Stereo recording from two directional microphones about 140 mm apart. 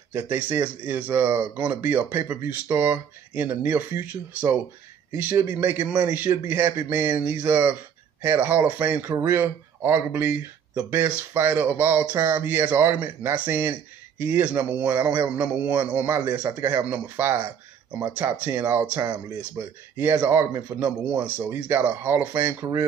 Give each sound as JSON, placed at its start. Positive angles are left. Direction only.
{"t": 0.1, "sound": "a man's voice", "side_deg": -15}